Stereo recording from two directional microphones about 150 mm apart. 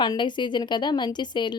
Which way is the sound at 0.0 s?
30° left (ahead or behind).